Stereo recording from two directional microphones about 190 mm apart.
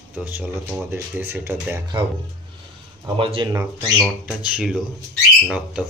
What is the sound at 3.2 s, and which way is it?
Speech, 30° right (ahead or behind).